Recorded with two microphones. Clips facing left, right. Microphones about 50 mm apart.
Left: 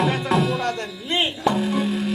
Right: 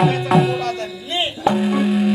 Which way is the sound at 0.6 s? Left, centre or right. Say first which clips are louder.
Right 2 dB; left.